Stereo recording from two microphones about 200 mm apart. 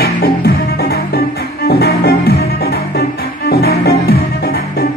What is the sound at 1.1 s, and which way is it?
Music, 50° left (ahead or behind).